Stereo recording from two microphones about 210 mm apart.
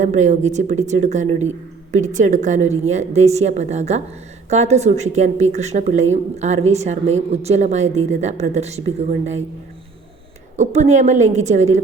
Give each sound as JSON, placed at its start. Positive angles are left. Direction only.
{"t": 0.0, "sound": "speech", "side_deg": -35}
{"t": 10.6, "sound": "speech", "side_deg": -35}